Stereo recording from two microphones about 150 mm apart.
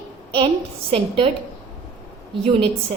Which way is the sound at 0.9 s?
35° right (ahead or behind).